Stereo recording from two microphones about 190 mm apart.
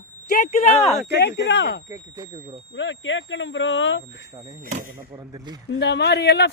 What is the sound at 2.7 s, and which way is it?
Speech, 75° left (ahead or behind).